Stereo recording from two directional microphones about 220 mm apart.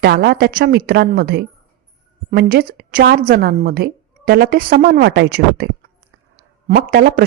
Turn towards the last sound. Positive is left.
turn(degrees=-40)  # may be behind; listen again after turning